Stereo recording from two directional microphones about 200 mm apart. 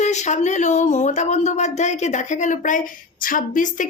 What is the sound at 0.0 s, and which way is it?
Speech, 35° left (ahead or behind).